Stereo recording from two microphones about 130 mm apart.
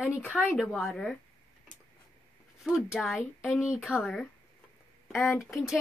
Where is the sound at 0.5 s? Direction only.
Centre (ahead or behind).